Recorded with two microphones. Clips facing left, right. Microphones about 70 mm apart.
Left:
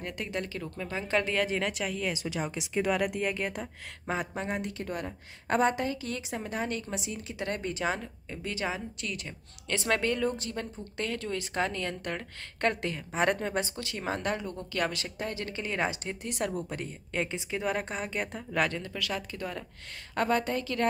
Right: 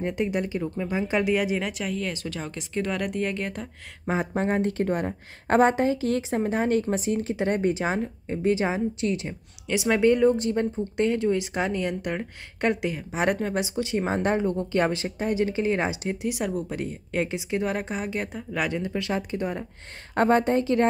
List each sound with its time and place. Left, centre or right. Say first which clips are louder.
0.0 s speech: right 9 dB; right; by 2.1 s centre
2.1 s speech: even; centre
4.1 s speech: right 7 dB; right
4.5 s a woman's voice: right 10 dB; right
7.3 s speech: right 5 dB; right
9.7 s speech: right 5 dB; centre
10.0 s speech: right 10 dB; right; by 13.7 s centre
13.7 s speech: right 8 dB; right; by 18.7 s centre
18.7 s speech: right 7 dB; right